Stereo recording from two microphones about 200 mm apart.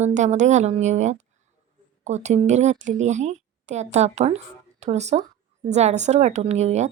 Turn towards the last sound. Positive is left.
turn(degrees=-35)  # may be behind; listen again after turning